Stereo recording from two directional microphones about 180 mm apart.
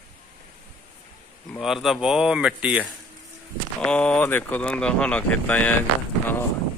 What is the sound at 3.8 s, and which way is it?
Speech, 5° left (ahead or behind).